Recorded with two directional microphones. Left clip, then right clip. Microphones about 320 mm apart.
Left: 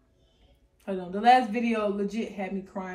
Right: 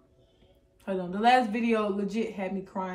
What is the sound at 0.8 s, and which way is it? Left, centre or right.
Speech, centre.